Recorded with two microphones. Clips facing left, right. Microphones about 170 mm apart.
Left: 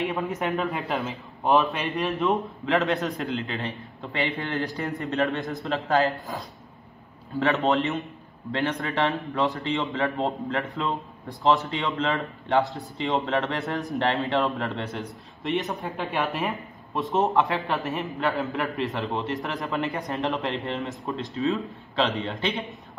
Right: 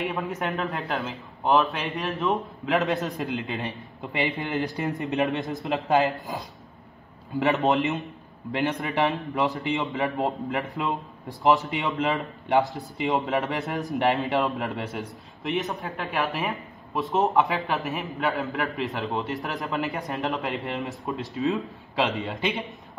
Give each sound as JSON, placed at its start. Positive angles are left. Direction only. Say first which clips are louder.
{"t": 0.0, "sound": "a man's voice", "louder": "left 1 dB", "side_deg": 0}
{"t": 3.4, "sound": "a man's voice", "louder": "even", "side_deg": -15}